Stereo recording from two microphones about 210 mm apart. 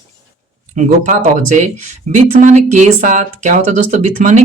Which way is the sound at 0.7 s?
35° right (ahead or behind).